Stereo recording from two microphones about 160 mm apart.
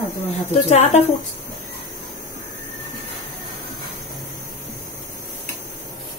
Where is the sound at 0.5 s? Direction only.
45° left (ahead or behind).